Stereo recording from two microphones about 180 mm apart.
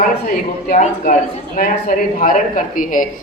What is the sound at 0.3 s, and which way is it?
A man's voice, 50° left (ahead or behind).